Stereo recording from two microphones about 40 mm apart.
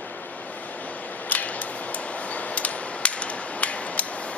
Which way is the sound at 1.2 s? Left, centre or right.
Left.